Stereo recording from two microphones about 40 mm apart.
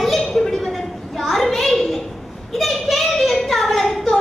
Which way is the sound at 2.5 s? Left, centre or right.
Centre.